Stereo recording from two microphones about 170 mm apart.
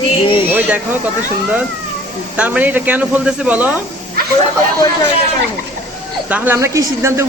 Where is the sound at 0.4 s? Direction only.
10° right (ahead or behind).